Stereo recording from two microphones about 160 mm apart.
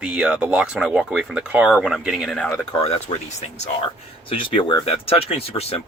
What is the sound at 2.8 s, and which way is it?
Speech, 40° left (ahead or behind).